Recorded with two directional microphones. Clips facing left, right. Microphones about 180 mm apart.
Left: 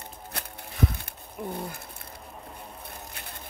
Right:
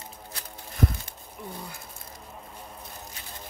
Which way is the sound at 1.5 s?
60° left (ahead or behind).